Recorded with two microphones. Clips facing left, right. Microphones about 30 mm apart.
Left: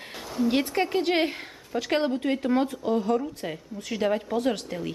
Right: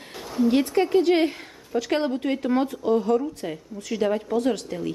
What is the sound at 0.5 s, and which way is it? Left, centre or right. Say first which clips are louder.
Speech: right 5 dB; centre.